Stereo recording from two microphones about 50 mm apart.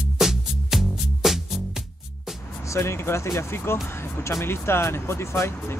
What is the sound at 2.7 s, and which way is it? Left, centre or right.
Speech, left.